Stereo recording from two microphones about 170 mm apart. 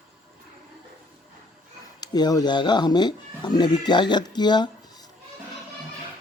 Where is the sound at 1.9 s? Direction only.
25° left (ahead or behind).